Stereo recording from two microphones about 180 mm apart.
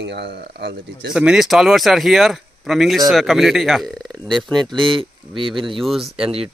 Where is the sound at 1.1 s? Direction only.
5° right (ahead or behind).